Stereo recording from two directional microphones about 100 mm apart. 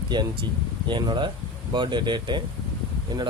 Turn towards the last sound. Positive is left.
turn(degrees=-40)  # may be behind; listen again after turning